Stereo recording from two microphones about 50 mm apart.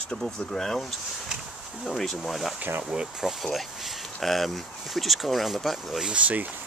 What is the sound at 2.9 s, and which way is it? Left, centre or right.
Speech, centre.